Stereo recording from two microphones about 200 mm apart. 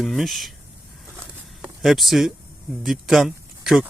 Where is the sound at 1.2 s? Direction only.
5° right (ahead or behind).